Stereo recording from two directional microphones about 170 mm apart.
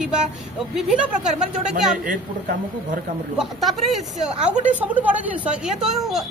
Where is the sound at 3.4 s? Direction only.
Centre (ahead or behind).